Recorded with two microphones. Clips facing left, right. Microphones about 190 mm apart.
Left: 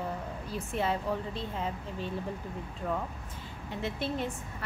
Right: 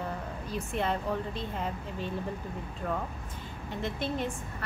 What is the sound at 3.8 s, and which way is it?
Speech, 5° left (ahead or behind).